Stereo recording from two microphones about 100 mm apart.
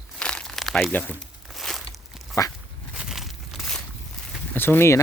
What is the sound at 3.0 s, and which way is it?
Crumpling, 5° right (ahead or behind).